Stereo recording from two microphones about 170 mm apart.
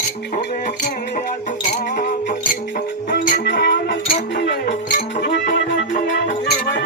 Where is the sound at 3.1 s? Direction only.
90° left.